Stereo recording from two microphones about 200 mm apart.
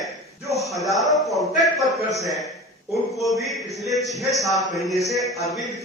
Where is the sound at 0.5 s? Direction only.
Centre (ahead or behind).